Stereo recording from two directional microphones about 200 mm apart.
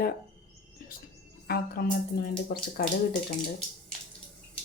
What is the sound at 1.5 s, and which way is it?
Speech, 50° left (ahead or behind).